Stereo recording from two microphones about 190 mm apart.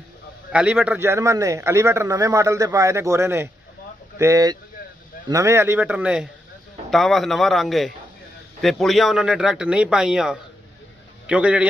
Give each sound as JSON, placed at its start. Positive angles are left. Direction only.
{"t": 0.5, "sound": "a man's voice", "side_deg": -5}